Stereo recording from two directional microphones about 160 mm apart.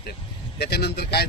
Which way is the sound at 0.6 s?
90° left.